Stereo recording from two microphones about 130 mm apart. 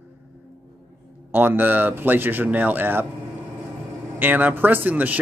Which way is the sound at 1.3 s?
15° right (ahead or behind).